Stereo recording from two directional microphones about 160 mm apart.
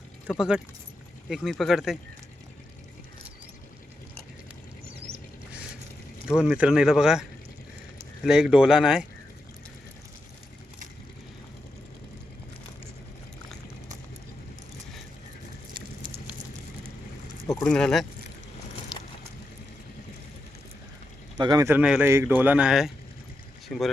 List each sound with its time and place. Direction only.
0.3 s speech: 5° right (ahead or behind)
6.2 s speech: 5° right (ahead or behind)
17.6 s speech: 5° left (ahead or behind)
21.3 s a man's voice: 25° right (ahead or behind)
21.7 s a man's voice: 10° right (ahead or behind)